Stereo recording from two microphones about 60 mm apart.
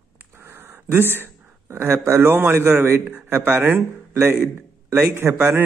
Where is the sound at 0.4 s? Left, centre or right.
Right.